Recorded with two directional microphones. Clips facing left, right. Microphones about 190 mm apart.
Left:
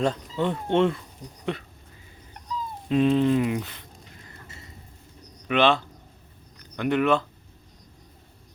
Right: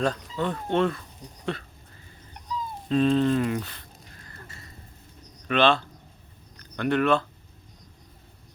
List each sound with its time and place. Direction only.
0.0 s speech: 25° left (ahead or behind)
2.9 s a sound: 15° left (ahead or behind)
5.5 s a man's voice: 15° left (ahead or behind)